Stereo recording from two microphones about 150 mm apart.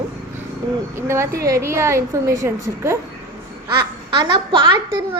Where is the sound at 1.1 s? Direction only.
20° right (ahead or behind).